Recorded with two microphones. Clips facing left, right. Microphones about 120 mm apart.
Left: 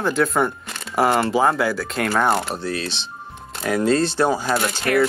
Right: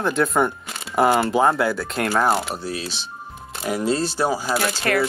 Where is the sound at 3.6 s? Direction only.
60° left (ahead or behind).